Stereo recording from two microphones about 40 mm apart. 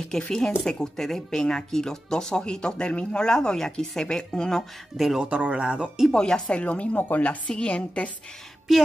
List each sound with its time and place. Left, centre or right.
0.1 s speech: centre
4.9 s speech: centre
5.2 s speech: right
6.1 s a woman's voice: centre
6.5 s speech: left
7.0 s a woman's voice: left
7.2 s a woman's voice: left